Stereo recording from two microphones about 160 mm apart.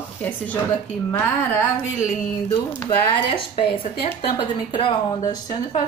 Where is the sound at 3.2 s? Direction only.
35° left (ahead or behind).